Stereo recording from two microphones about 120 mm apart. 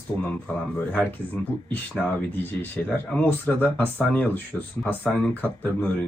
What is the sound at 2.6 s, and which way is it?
A man's voice, 10° left (ahead or behind).